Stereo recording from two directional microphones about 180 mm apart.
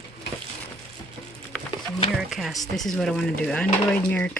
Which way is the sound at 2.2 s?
Centre (ahead or behind).